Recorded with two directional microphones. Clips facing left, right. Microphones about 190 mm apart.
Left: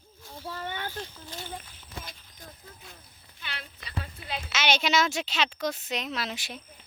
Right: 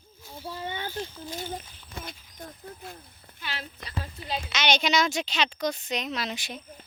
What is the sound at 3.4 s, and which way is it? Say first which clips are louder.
Speech: right 5 dB; 40° right (ahead or behind).